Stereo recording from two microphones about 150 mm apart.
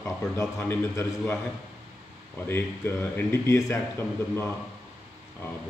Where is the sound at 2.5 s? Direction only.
15° left (ahead or behind).